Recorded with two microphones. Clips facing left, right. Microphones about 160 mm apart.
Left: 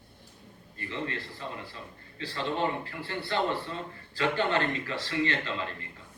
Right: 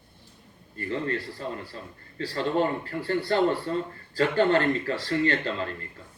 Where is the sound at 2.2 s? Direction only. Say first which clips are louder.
Right 5 dB; 45° right (ahead or behind).